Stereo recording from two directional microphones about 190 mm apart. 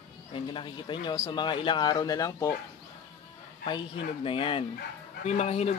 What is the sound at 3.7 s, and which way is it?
Speech, 25° left (ahead or behind).